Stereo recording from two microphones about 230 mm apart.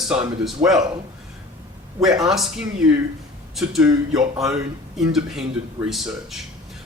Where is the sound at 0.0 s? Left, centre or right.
Centre.